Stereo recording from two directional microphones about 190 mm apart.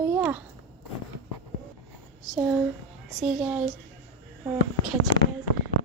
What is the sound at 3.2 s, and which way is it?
Speech, 5° right (ahead or behind).